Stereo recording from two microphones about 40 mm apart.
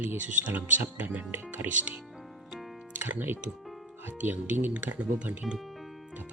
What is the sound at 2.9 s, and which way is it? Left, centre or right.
Music, right.